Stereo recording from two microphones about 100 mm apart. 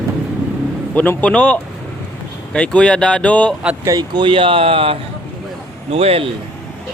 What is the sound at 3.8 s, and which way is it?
Speech, 40° right (ahead or behind).